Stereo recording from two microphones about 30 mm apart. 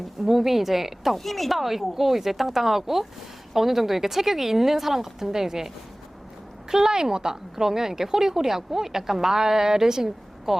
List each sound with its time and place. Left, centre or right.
0.2 s a woman's voice: centre
1.2 s a woman's voice: centre